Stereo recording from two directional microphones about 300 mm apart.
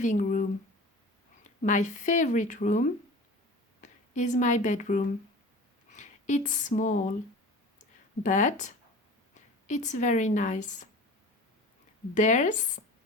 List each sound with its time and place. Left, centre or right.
0.0 s speech: left
1.5 s speech: left
7.8 s a sound: left
9.3 s speech: left
12.1 s speech: left